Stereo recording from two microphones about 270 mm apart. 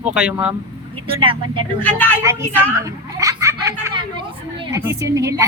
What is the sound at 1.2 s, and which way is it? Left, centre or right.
Speech, centre.